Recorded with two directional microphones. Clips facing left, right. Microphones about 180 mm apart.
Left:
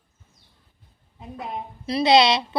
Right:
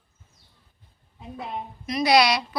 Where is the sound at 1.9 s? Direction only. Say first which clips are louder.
Left 2 dB; 25° left (ahead or behind).